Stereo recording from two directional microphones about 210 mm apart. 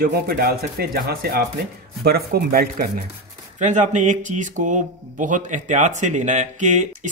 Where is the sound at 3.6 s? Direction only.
35° right (ahead or behind).